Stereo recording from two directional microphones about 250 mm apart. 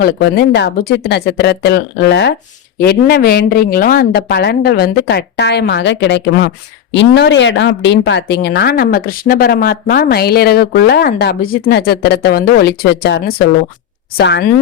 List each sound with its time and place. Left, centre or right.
0.0 s speech: left